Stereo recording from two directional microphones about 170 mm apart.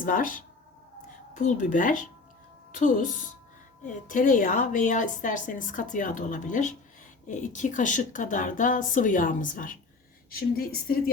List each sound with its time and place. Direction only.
0.0 s a woman's voice: 55° left (ahead or behind)